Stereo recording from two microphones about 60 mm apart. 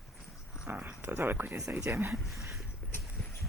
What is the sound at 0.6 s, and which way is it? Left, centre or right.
Speech, right.